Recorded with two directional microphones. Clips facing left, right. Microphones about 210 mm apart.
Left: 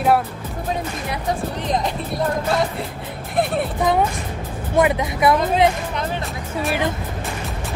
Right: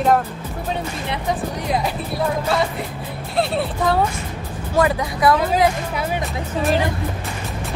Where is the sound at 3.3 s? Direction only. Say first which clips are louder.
Even; 15° left (ahead or behind).